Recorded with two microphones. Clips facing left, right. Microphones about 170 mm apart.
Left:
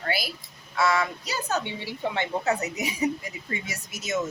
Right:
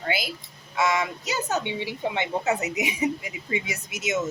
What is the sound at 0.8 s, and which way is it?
A woman's voice, 20° right (ahead or behind).